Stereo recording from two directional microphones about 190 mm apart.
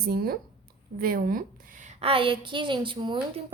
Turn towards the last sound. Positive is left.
turn(degrees=-25)  # may be behind; listen again after turning